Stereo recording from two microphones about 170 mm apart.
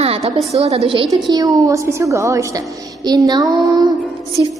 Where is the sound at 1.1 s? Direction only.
20° right (ahead or behind).